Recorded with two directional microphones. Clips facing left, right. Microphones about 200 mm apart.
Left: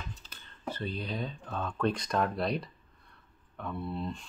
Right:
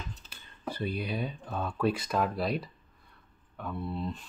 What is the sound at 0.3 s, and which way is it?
Speech, 10° right (ahead or behind).